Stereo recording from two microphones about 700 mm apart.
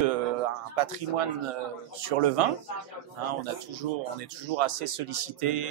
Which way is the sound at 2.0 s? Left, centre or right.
Right.